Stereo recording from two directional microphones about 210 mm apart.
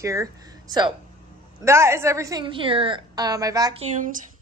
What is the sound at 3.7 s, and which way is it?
Speech, 35° right (ahead or behind).